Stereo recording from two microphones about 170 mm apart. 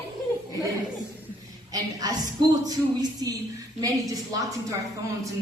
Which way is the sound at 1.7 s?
20° right (ahead or behind).